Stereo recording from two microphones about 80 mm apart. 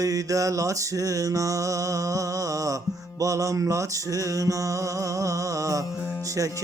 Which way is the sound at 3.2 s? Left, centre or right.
Right.